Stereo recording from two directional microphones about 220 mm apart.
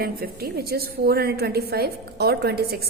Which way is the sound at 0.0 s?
45° right (ahead or behind).